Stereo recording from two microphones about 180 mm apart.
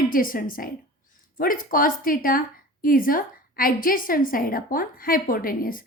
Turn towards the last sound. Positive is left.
turn(degrees=50)  # may be behind; listen again after turning